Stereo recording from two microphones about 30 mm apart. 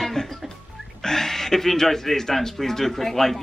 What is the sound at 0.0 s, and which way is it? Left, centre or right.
Music, centre.